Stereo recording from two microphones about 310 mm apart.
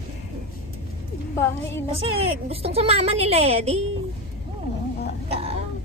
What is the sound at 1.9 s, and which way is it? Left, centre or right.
A woman's voice, centre.